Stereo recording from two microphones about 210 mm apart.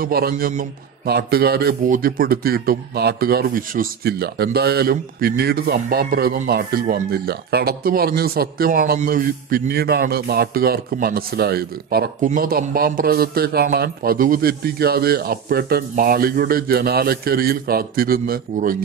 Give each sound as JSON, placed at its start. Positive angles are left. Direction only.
{"t": 0.0, "sound": "a man's voice", "side_deg": -45}